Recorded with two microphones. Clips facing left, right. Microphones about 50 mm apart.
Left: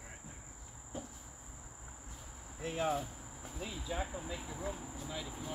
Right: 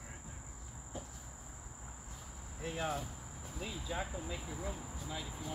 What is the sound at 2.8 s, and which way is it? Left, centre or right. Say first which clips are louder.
Cricket: left 4 dB; centre.